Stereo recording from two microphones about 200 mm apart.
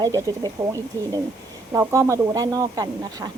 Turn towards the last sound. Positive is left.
turn(degrees=-20)  # may be behind; listen again after turning